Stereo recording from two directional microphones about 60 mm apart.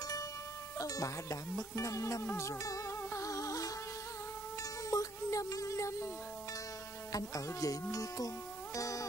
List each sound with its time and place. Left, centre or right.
0.7 s speech: left
2.3 s music: left
4.9 s music: left
7.1 s speech: left
8.7 s music: left